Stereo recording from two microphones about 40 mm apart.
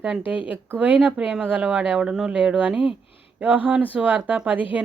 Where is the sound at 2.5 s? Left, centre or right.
Right.